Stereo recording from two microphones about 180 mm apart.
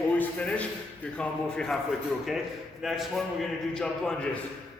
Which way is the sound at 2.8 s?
Centre (ahead or behind).